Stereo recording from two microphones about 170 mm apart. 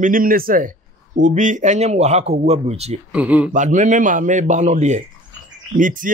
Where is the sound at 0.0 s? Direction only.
55° right (ahead or behind).